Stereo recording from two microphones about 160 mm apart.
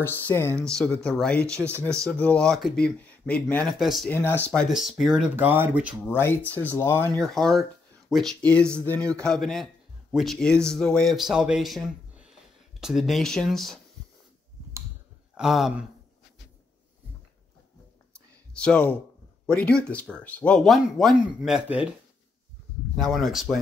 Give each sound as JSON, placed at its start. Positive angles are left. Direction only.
{"t": 0.0, "sound": "speech", "side_deg": 15}
{"t": 0.7, "sound": "speech", "side_deg": 5}
{"t": 4.1, "sound": "speech", "side_deg": 15}
{"t": 4.7, "sound": "speech", "side_deg": 0}
{"t": 5.3, "sound": "speech", "side_deg": -15}
{"t": 6.0, "sound": "speech", "side_deg": 15}
{"t": 7.2, "sound": "speech", "side_deg": 0}
{"t": 15.3, "sound": "speech", "side_deg": -5}
{"t": 18.5, "sound": "speech", "side_deg": 5}
{"t": 22.9, "sound": "speech", "side_deg": 0}